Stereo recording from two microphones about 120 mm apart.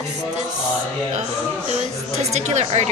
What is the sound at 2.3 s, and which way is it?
Speech, 70° right (ahead or behind).